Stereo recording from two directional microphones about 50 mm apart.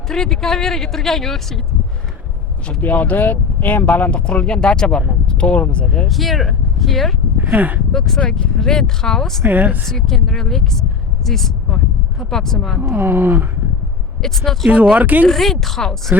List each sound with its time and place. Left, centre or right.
0.1 s speech: centre
2.8 s speech: left; by 5.0 s centre
5.2 s a sound: centre
6.1 s speech: centre
7.3 s speech: right
7.9 s speech: centre
9.4 s speech: right
9.8 s speech: centre
12.8 s speech: right
14.2 s speech: centre
14.9 s speech: right
15.3 s speech: centre